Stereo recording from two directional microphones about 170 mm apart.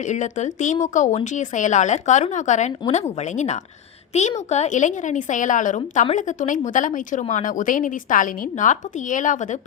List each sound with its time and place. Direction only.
0.0 s speech: 45° left (ahead or behind)